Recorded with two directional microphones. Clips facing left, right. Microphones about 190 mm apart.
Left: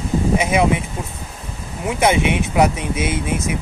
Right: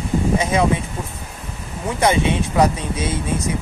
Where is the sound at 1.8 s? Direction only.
15° left (ahead or behind).